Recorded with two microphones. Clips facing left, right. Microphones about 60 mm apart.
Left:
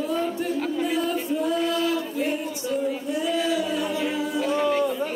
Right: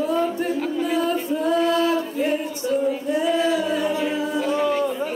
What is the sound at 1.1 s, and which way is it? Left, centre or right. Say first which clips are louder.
Singing: right 3 dB; right.